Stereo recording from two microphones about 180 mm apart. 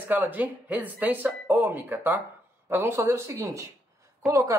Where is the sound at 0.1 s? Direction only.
10° right (ahead or behind).